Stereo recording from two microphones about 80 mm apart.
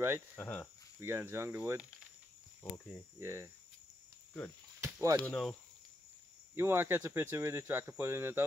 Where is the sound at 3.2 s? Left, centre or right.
Right.